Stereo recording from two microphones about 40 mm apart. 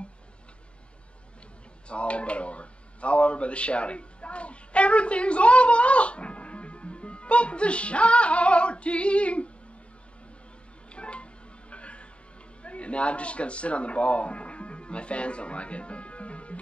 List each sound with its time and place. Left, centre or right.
1.9 s speech: left
10.9 s music: left
12.6 s speech: left